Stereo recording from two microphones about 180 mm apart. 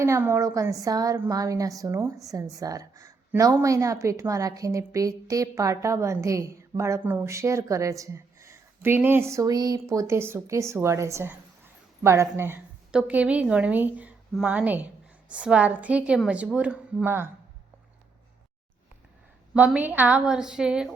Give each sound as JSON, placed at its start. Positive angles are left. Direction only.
{"t": 0.0, "sound": "a woman's voice", "side_deg": -15}
{"t": 19.5, "sound": "a woman's voice", "side_deg": -10}